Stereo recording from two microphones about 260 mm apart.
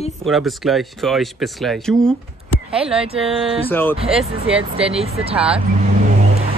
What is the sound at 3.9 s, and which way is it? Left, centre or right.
Speech, right.